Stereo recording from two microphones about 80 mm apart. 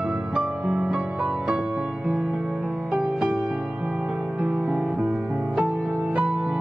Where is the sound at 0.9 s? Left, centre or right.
Centre.